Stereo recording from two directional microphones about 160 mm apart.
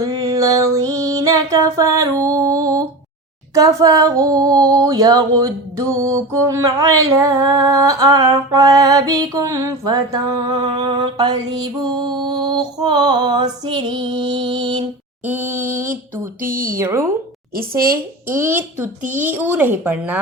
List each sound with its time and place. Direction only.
0.0 s music: 20° right (ahead or behind)
3.5 s female singing: 20° right (ahead or behind)
15.3 s a woman's voice: 15° right (ahead or behind)
16.4 s speech: 60° right (ahead or behind)
16.7 s a woman's voice: 15° right (ahead or behind)
17.5 s speech: 65° right (ahead or behind)
18.3 s a woman's voice: 15° right (ahead or behind)